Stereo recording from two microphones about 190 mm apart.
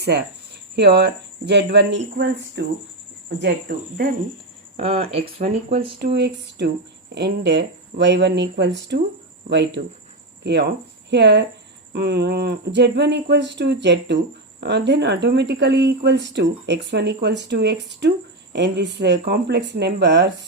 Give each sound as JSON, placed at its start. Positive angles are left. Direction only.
{"t": 0.8, "sound": "speech", "side_deg": -60}
{"t": 4.8, "sound": "speech", "side_deg": -30}
{"t": 6.0, "sound": "speech", "side_deg": -60}